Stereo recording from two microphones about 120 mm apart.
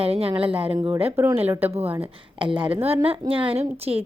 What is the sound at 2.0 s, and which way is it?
A woman's voice, 45° right (ahead or behind).